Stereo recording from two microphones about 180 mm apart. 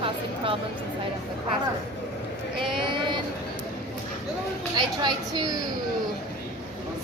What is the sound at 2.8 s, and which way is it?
Speech, 25° right (ahead or behind).